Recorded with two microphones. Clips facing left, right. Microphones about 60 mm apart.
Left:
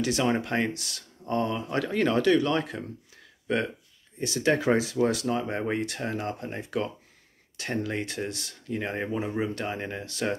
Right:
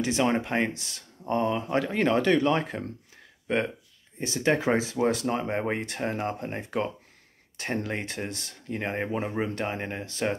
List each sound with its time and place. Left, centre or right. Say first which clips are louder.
0.0 s speech: right 1 dB; right